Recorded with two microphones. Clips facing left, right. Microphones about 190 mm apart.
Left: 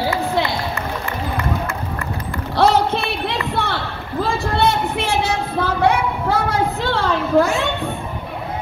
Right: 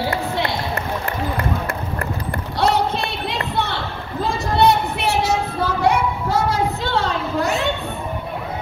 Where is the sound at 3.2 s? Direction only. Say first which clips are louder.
Left 1 dB; 60° left (ahead or behind).